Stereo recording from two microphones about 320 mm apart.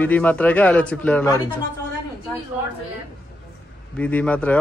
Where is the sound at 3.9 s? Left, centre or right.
Centre.